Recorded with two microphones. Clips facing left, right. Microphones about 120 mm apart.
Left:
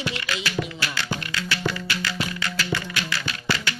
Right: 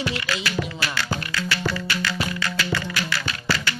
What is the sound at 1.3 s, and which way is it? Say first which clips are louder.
Music: right 1 dB; 25° left (ahead or behind).